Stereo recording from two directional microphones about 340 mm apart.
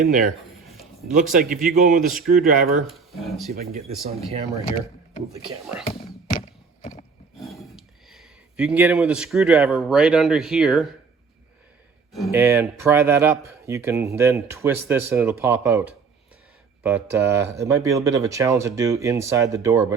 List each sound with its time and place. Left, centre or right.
0.0 s speech: right
2.0 s speech: centre
2.2 s speech: right
2.8 s speech: centre
5.8 s music: centre
7.3 s speech: centre
12.1 s speech: centre